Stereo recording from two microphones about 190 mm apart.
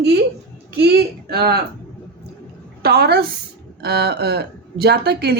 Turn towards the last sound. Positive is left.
turn(degrees=-60)  # may be behind; listen again after turning